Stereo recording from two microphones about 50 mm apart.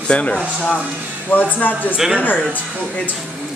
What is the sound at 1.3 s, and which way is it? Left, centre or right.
Speech, left.